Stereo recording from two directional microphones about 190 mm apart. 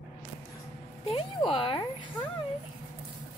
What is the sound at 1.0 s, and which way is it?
Speech, 30° left (ahead or behind).